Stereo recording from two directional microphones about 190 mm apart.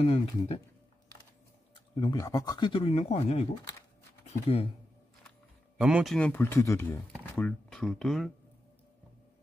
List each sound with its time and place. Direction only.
0.0 s speech: 30° left (ahead or behind)
2.0 s speech: 20° left (ahead or behind)
5.8 s speech: 5° right (ahead or behind)